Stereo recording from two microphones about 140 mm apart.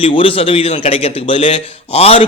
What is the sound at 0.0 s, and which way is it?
Speech, 40° left (ahead or behind).